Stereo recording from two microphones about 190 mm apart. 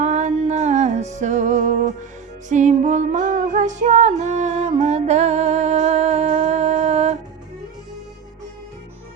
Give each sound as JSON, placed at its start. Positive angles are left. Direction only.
{"t": 0.0, "sound": "music", "side_deg": -40}